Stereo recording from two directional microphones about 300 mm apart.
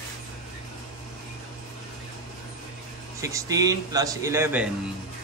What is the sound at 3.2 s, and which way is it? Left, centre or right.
A man's voice, centre.